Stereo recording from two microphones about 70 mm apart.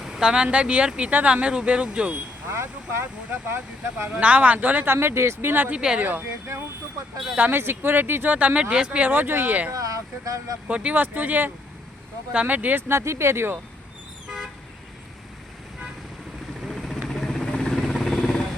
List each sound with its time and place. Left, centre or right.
0.0 s speech: centre
2.5 s speech: right
4.1 s speech: centre
5.7 s speech: centre
6.0 s speech: right
7.3 s speech: right
9.0 s speech: right
9.7 s speech: right
10.7 s speech: centre
12.9 s speech: right
16.6 s vehicle: centre